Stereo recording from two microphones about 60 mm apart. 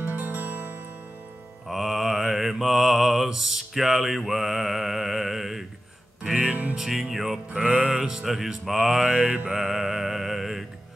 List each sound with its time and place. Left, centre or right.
0.0 s music: right
1.7 s mantra: centre
6.7 s mantra: centre
9.5 s music: centre